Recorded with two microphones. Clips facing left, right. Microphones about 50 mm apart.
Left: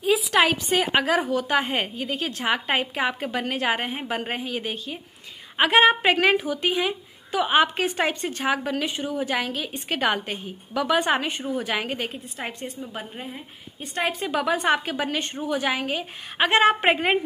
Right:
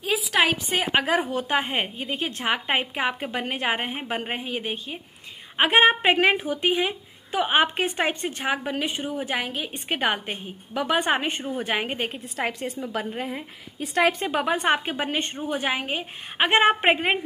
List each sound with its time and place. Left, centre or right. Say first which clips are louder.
0.0 s a woman's voice: left 2 dB; centre
1.0 s a woman's voice: left 1 dB; right
12.1 s a woman's voice: right 5 dB; right
14.2 s a woman's voice: even; right
16.8 s a woman's voice: left 1 dB; centre